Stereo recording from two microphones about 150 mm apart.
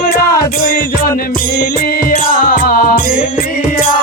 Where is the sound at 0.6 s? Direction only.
70° left (ahead or behind).